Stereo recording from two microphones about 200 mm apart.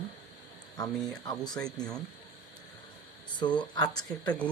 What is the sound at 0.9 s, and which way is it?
Speech, centre (ahead or behind).